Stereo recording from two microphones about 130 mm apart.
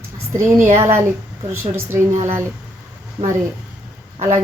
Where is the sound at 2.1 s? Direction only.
60° right (ahead or behind).